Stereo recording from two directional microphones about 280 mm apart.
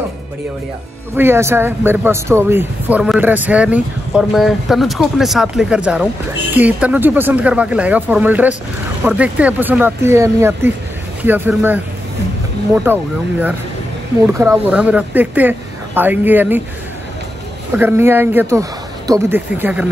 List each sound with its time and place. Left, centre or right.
1.1 s speech: centre
12.8 s speech: centre
17.7 s speech: centre